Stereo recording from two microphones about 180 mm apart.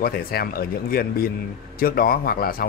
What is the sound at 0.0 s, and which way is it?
Speech, 55° left (ahead or behind).